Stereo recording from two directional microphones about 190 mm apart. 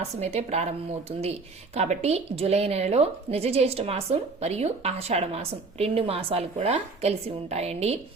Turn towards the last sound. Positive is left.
turn(degrees=-35)  # may be behind; listen again after turning